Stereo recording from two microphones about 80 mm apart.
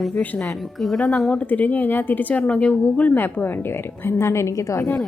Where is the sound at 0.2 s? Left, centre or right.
Centre.